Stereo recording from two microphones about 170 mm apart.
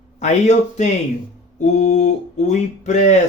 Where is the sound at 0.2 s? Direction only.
45° left (ahead or behind).